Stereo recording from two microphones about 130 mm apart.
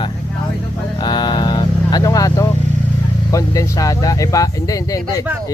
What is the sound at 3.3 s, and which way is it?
Speech, 25° left (ahead or behind).